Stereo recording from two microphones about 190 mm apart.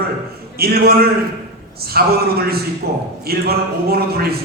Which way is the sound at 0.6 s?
55° right (ahead or behind).